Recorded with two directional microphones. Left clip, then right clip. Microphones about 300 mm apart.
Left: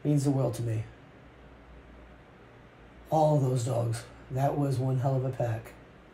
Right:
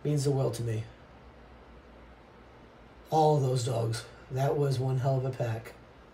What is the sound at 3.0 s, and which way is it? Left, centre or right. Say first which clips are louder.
A man's voice: even; centre.